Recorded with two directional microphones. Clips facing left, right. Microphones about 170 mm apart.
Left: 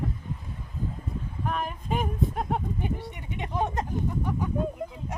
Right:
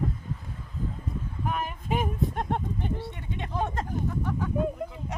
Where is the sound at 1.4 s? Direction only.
5° right (ahead or behind); by 3.8 s 15° left (ahead or behind).